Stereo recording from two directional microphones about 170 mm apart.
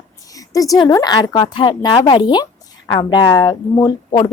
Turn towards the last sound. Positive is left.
turn(degrees=20)  # may be behind; listen again after turning